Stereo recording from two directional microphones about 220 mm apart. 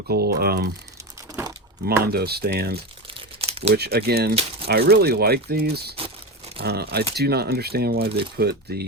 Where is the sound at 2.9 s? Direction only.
25° right (ahead or behind).